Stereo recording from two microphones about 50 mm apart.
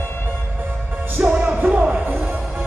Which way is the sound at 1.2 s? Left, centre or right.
Right.